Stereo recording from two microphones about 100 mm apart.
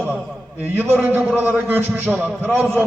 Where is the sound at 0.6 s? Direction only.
15° right (ahead or behind).